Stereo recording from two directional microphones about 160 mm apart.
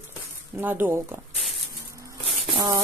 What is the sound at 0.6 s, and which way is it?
Speech, 10° right (ahead or behind).